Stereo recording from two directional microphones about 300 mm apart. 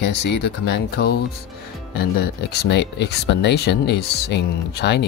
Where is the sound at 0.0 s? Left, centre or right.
Left.